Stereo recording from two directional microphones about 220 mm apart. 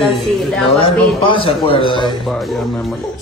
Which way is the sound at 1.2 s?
25° left (ahead or behind).